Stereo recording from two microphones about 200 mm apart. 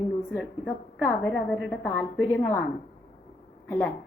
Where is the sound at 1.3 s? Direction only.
5° left (ahead or behind).